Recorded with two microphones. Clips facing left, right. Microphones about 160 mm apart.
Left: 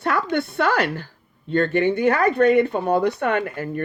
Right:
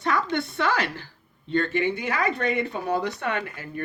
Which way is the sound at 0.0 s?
55° left (ahead or behind).